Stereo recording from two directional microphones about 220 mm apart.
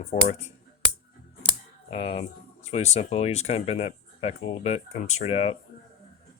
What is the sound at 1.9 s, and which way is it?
Speech, 25° left (ahead or behind).